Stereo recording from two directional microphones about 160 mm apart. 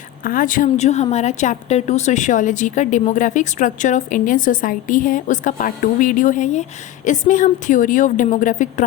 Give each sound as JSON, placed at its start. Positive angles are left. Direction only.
{"t": 0.3, "sound": "speech", "side_deg": 60}